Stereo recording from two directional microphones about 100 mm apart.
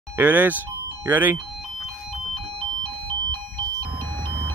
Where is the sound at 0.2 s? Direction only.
20° right (ahead or behind).